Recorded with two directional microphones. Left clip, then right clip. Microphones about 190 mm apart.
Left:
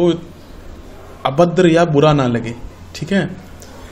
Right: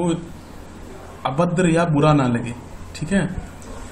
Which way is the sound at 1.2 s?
35° left (ahead or behind).